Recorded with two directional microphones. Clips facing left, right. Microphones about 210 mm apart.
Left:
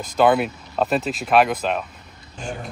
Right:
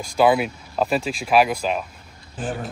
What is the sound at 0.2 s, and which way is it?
Speech, 5° right (ahead or behind).